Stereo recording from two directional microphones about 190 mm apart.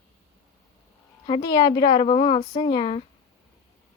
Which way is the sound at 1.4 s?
25° left (ahead or behind).